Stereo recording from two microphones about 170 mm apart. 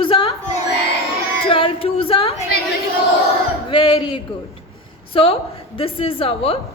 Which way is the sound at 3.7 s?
25° left (ahead or behind).